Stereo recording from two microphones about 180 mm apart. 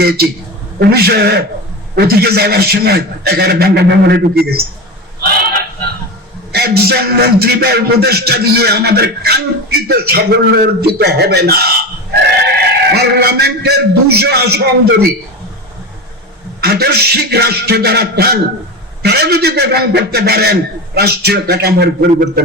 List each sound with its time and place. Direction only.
0.0 s a man's voice: 60° right (ahead or behind)
5.4 s a sound: 55° right (ahead or behind)
6.5 s a man's voice: 60° right (ahead or behind)
16.6 s a man's voice: 65° right (ahead or behind)